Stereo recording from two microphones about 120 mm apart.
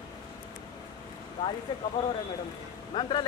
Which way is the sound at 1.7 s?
40° left (ahead or behind).